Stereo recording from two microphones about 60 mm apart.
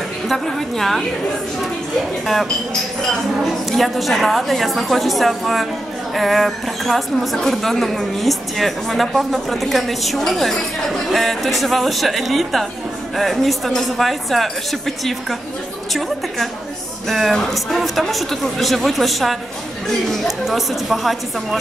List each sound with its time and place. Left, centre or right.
0.3 s a woman's voice: centre
3.7 s a woman's voice: centre
17.1 s a woman's voice: centre